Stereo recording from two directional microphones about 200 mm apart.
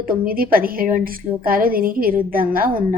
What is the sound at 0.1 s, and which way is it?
A woman's voice, 45° right (ahead or behind).